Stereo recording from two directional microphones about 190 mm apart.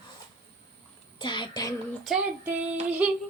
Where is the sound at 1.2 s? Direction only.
25° left (ahead or behind).